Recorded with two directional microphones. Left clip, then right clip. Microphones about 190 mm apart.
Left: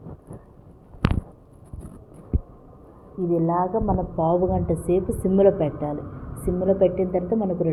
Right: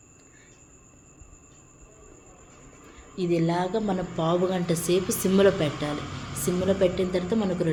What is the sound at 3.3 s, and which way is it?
A woman's voice, 15° right (ahead or behind).